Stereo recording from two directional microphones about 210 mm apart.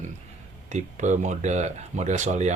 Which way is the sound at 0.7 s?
35° right (ahead or behind).